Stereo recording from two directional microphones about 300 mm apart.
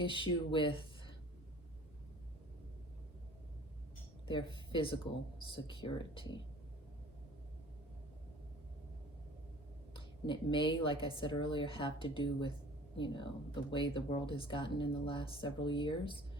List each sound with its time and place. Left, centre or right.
0.0 s speech: centre
4.7 s speech: centre
9.9 s a woman's voice: centre